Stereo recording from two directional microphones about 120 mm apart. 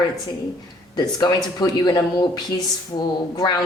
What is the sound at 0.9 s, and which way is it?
Speech, 35° left (ahead or behind).